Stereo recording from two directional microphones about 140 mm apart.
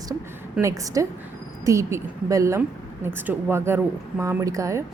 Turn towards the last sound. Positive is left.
turn(degrees=-20)  # may be behind; listen again after turning